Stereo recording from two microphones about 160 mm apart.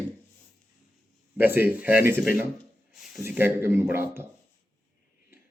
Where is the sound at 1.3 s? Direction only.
10° right (ahead or behind).